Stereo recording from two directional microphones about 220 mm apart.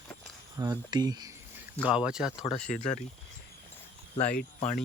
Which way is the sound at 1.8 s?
5° right (ahead or behind).